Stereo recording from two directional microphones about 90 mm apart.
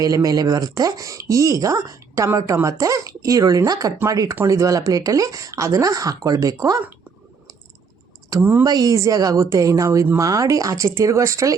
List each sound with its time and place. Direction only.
0.0 s speech: 40° right (ahead or behind)
8.4 s speech: 25° right (ahead or behind)
8.6 s speech: 45° right (ahead or behind)